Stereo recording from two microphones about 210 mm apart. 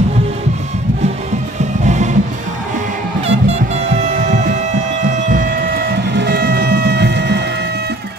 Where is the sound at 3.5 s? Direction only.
30° right (ahead or behind); by 7.4 s 55° right (ahead or behind).